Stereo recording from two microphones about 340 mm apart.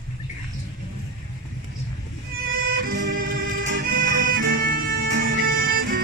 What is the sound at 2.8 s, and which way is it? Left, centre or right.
Music, right.